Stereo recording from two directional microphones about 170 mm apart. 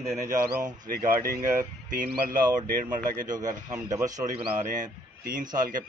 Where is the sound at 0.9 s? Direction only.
55° right (ahead or behind).